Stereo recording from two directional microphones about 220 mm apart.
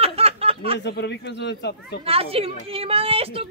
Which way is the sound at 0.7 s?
50° left (ahead or behind).